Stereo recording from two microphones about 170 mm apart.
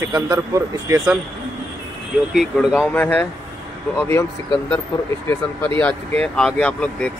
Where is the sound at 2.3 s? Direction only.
Centre (ahead or behind).